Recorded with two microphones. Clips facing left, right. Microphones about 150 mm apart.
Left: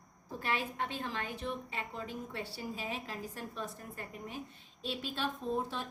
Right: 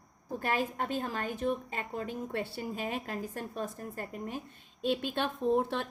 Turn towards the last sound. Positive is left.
turn(degrees=-65)  # may be behind; listen again after turning